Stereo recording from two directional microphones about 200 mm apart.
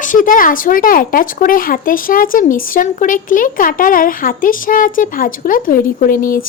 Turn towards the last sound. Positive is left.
turn(degrees=45)  # may be behind; listen again after turning